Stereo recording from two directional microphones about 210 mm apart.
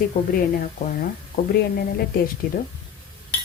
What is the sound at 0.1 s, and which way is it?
Speech, 40° left (ahead or behind).